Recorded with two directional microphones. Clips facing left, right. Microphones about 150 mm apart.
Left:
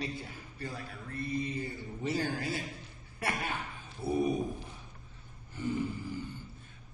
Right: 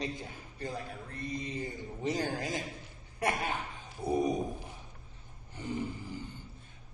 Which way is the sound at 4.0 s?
15° right (ahead or behind).